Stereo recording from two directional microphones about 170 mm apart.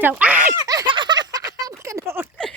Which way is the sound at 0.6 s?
25° right (ahead or behind).